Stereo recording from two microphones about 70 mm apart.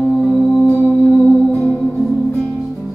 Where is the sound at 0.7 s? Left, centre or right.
Right.